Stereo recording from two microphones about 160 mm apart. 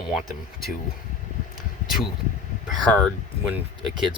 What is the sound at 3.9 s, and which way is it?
Speech, 30° right (ahead or behind).